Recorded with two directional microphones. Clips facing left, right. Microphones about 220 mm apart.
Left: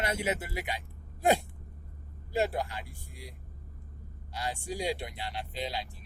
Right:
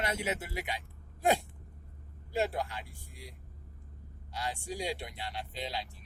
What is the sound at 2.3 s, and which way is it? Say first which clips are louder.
Speech: left 2 dB; 5° left (ahead or behind).